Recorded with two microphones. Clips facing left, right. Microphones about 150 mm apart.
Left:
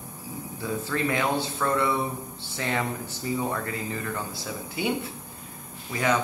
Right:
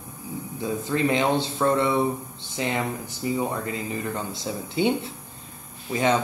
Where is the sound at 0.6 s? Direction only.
20° right (ahead or behind).